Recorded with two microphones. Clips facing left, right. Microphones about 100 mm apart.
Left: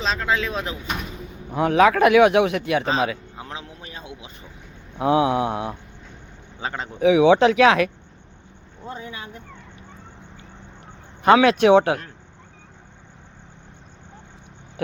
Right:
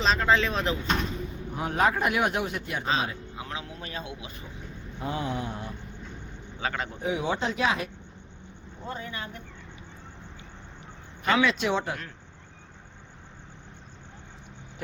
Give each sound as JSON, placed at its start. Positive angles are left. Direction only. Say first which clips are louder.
{"t": 0.0, "sound": "speech", "louder": "even", "side_deg": 0}
{"t": 1.5, "sound": "speech", "louder": "left 9 dB", "side_deg": 90}
{"t": 3.3, "sound": "a sound", "louder": "left 1 dB", "side_deg": 30}
{"t": 3.8, "sound": "a sound", "louder": "right 2 dB", "side_deg": 15}
{"t": 4.9, "sound": "mantra", "louder": "left 12 dB", "side_deg": 75}
{"t": 6.6, "sound": "speech", "louder": "left 2 dB", "side_deg": 25}
{"t": 7.0, "sound": "speech", "louder": "left 15 dB", "side_deg": 90}
{"t": 8.9, "sound": "speech", "louder": "left 2 dB", "side_deg": 15}
{"t": 11.3, "sound": "speech", "louder": "left 10 dB", "side_deg": 60}